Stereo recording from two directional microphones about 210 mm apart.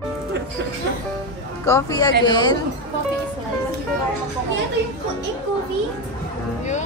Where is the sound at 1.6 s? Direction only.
15° left (ahead or behind).